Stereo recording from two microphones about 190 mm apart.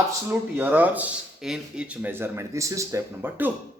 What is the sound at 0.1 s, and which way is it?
Speech, 10° right (ahead or behind).